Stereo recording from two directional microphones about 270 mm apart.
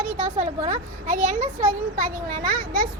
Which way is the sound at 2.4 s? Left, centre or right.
Centre.